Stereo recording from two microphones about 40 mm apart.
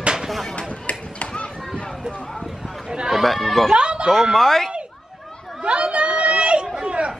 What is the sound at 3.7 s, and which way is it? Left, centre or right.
Speech, right.